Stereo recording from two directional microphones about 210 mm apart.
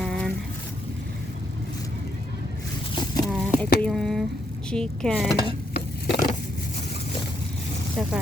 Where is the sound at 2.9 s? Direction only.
20° left (ahead or behind).